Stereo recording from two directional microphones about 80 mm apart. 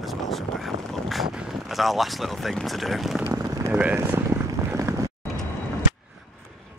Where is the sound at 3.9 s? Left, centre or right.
Right.